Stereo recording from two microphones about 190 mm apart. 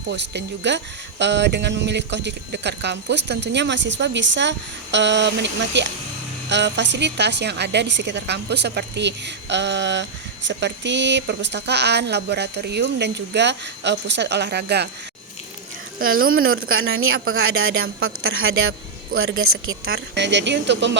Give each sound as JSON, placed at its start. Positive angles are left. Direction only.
{"t": 0.1, "sound": "a woman's voice", "side_deg": -65}
{"t": 16.3, "sound": "a woman's voice", "side_deg": -90}
{"t": 19.8, "sound": "speech", "side_deg": -60}